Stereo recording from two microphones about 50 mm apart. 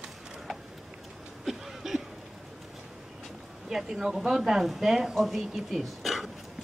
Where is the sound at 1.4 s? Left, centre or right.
Centre.